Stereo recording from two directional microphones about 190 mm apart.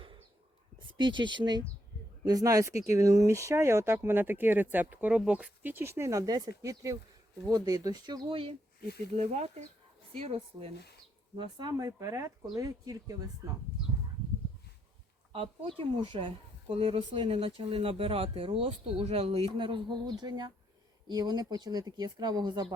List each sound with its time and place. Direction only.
0.8 s speech: 25° right (ahead or behind)
11.3 s speech: 20° right (ahead or behind)
15.3 s speech: 30° right (ahead or behind)